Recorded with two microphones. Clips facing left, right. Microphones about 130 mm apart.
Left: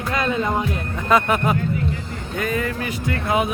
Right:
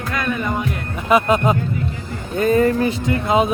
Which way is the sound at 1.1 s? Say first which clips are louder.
Right 3 dB; 15° right (ahead or behind).